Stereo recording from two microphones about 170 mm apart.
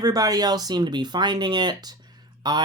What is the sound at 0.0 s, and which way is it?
Speech, 20° right (ahead or behind).